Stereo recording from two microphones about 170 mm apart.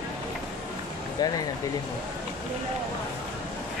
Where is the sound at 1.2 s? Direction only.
20° left (ahead or behind).